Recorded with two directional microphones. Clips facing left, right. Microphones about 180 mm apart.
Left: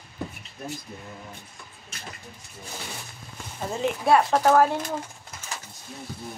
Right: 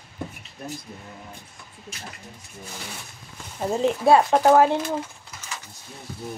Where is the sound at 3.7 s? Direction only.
30° right (ahead or behind).